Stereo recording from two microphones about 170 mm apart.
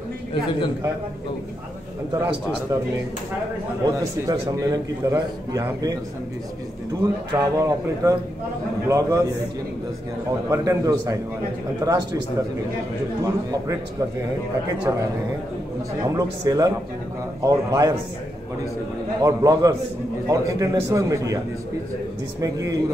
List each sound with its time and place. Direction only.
0.3 s a man's voice: 30° left (ahead or behind)
2.1 s a man's voice: 15° right (ahead or behind)
3.8 s a man's voice: 20° right (ahead or behind)
7.0 s a man's voice: 20° right (ahead or behind)
10.5 s a man's voice: 20° right (ahead or behind)
13.2 s a man's voice: 20° right (ahead or behind)
14.9 s a man's voice: 20° right (ahead or behind)
19.2 s a man's voice: 20° right (ahead or behind)
22.4 s a man's voice: 20° right (ahead or behind)